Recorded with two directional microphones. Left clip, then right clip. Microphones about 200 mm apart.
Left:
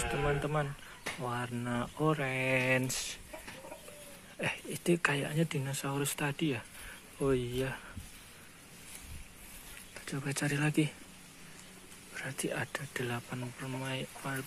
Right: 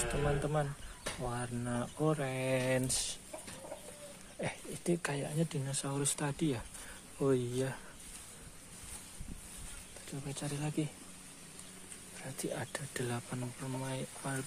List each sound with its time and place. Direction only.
0.4 s speech: centre (ahead or behind)
4.4 s speech: 5° left (ahead or behind)
10.2 s speech: 25° left (ahead or behind)
12.2 s speech: 10° left (ahead or behind)